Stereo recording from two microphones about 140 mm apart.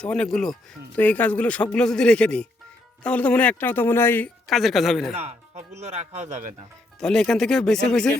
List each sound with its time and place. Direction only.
0.0 s speech: 10° left (ahead or behind)
4.4 s speech: centre (ahead or behind)
5.1 s speech: 50° right (ahead or behind)
7.0 s speech: 5° left (ahead or behind)